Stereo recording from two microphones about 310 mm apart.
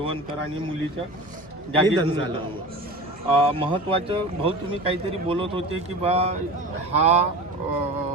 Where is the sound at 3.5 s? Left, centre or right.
Centre.